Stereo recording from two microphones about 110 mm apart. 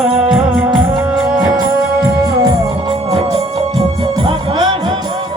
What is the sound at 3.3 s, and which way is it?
Music, 60° right (ahead or behind).